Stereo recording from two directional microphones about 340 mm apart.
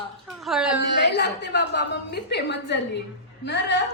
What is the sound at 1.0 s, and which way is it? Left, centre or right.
A woman's voice, left.